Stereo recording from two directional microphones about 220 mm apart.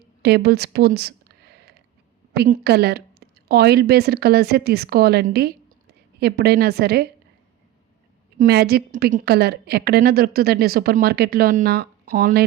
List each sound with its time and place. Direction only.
0.2 s a sound: 50° right (ahead or behind)
2.3 s a woman's voice: 50° right (ahead or behind)
8.4 s a woman's voice: 45° right (ahead or behind)